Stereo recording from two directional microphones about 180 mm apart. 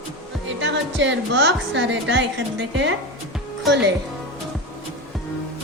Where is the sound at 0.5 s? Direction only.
90° right.